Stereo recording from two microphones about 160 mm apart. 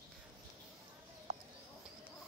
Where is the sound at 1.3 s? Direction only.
45° right (ahead or behind).